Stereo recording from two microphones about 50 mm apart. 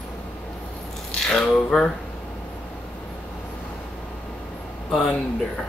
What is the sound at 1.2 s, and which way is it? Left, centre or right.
Speech, centre.